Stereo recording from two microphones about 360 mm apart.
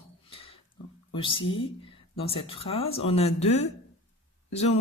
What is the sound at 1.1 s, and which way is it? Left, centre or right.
Speech, centre.